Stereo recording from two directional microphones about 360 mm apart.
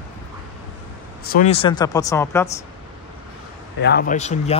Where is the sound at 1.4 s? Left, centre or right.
Centre.